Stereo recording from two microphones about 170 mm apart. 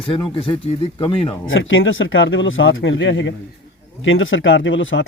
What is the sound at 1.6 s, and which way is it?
Speech, 90° left.